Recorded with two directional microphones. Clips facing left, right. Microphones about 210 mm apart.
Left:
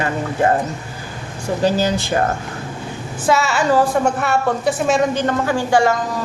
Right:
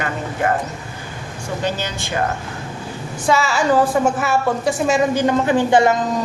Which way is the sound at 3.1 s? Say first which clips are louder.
Left 1 dB; 5° left (ahead or behind).